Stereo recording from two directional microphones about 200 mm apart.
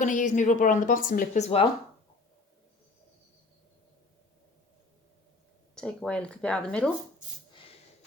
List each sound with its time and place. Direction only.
0.0 s speech: 35° left (ahead or behind)
5.7 s speech: 5° left (ahead or behind)